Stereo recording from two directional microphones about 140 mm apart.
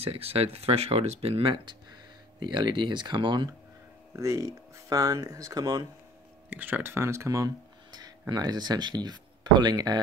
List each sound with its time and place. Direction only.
0.0 s speech: 45° right (ahead or behind)
4.1 s speech: 25° right (ahead or behind)
6.5 s speech: 15° right (ahead or behind); by 9.9 s 30° right (ahead or behind)